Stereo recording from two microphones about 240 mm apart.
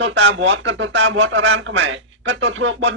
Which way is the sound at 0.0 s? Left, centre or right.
Right.